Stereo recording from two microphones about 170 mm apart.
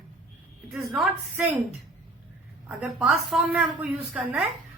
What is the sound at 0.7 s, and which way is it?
Speech, centre (ahead or behind).